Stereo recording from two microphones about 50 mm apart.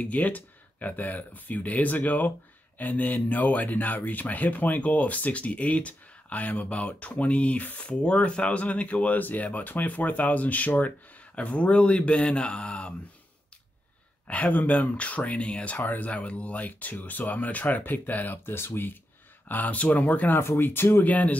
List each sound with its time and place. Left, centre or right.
0.0 s speech: left
14.2 s speech: left
16.1 s speech: left
18.4 s speech: left
19.4 s speech: left
20.3 s speech: left
21.0 s speech: left